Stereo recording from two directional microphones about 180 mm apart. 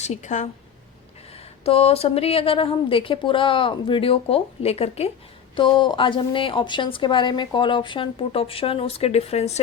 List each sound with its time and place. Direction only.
0.0 s a woman's voice: 40° left (ahead or behind)
1.6 s a woman's voice: 35° left (ahead or behind)